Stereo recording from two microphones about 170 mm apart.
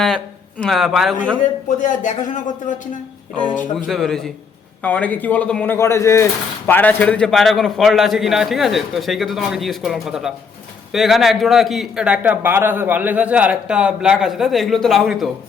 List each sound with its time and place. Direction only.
0.6 s a man's voice: centre (ahead or behind)
1.6 s speech: 50° left (ahead or behind)
3.8 s a man's voice: centre (ahead or behind)